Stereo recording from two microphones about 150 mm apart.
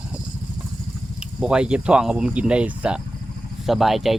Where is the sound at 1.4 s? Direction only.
5° right (ahead or behind).